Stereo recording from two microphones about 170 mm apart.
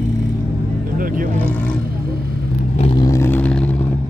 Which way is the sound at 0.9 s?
55° right (ahead or behind).